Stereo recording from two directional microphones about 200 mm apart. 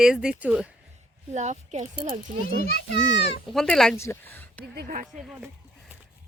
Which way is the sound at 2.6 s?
50° left (ahead or behind).